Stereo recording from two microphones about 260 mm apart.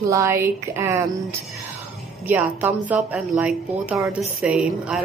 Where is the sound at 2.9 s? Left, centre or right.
Centre.